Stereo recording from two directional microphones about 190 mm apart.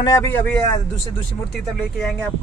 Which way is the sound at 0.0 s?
15° left (ahead or behind).